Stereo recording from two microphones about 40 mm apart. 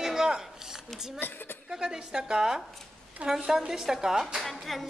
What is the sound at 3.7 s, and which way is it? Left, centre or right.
Speech, centre.